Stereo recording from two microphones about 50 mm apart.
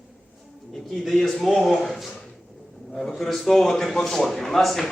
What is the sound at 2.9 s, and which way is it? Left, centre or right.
Speech, centre.